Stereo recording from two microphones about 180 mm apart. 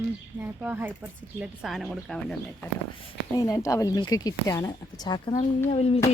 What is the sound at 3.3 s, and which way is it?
Speech, 15° left (ahead or behind).